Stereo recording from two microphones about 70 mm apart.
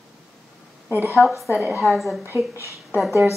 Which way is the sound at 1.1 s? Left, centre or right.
Centre.